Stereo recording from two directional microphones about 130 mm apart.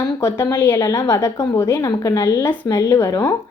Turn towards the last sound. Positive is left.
turn(degrees=25)  # may be behind; listen again after turning